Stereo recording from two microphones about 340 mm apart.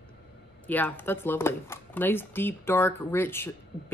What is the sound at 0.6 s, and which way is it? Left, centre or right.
Speech, centre.